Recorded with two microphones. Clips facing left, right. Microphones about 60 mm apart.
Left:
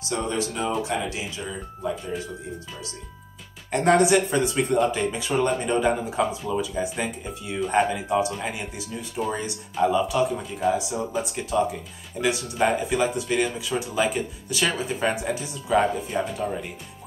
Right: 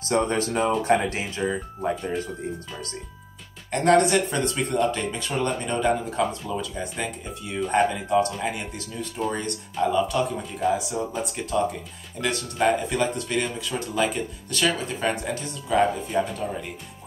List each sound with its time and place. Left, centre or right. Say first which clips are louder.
0.0 s speech: right 4 dB; right
3.7 s speech: even; centre